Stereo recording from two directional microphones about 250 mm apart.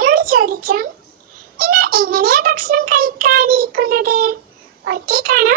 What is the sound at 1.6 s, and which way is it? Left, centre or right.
Child singing, right.